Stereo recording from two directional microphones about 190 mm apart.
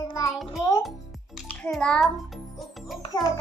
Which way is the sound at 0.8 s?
Centre (ahead or behind).